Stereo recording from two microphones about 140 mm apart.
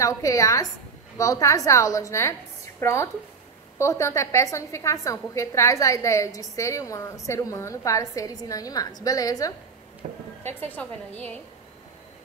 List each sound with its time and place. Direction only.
0.0 s a woman's voice: 25° left (ahead or behind)
10.0 s a sound: 60° right (ahead or behind)
10.6 s a woman's voice: 10° left (ahead or behind)